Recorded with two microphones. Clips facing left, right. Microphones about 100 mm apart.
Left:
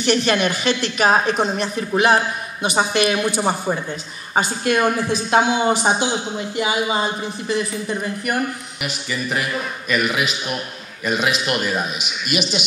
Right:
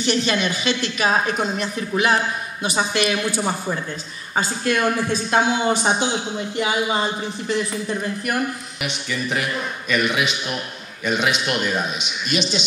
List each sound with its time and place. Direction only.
0.0 s speech: 55° left (ahead or behind)
1.2 s a woman's voice: 25° left (ahead or behind); by 12.6 s 5° left (ahead or behind)